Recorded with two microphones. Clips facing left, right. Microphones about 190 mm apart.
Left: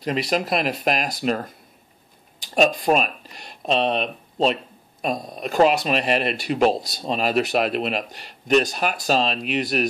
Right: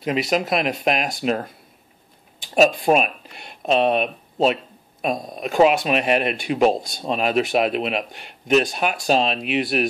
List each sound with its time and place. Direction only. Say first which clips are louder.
0.0 s speech: right 2 dB; centre (ahead or behind)
2.8 s speech: right 2 dB; 5° right (ahead or behind)
8.1 s speech: right 1 dB; 40° left (ahead or behind)
8.5 s speech: right 1 dB; centre (ahead or behind)